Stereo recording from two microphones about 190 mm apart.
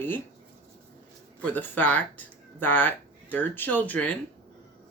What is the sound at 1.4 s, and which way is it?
Speech, 10° left (ahead or behind).